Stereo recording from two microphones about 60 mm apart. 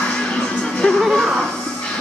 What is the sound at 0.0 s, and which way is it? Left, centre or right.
Music, centre.